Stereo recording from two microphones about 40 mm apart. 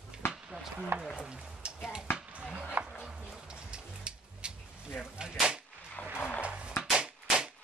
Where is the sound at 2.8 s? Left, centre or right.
Right.